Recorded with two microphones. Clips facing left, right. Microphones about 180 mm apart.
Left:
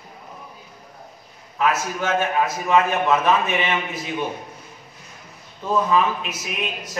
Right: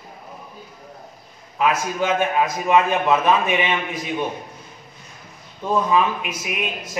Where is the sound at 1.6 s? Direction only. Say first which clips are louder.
Right 2 dB; 15° right (ahead or behind).